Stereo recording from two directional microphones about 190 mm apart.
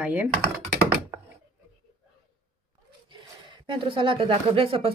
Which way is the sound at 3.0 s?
25° right (ahead or behind).